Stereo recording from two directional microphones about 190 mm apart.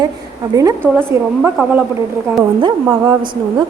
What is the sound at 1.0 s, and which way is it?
Speech, 10° right (ahead or behind).